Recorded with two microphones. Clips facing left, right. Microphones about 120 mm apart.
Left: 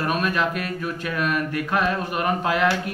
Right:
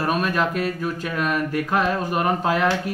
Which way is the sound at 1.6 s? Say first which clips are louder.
Right 1 dB; 30° right (ahead or behind).